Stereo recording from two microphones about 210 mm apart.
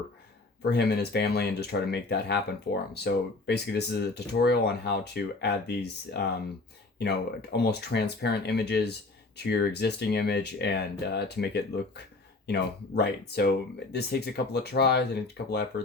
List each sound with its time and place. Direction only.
0.6 s speech: 50° left (ahead or behind)